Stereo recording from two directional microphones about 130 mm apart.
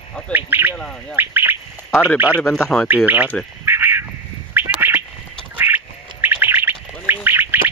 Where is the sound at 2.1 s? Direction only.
10° right (ahead or behind).